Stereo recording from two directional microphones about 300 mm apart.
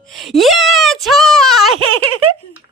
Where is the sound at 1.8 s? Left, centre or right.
Right.